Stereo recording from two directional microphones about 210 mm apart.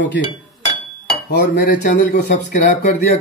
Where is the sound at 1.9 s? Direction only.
40° left (ahead or behind).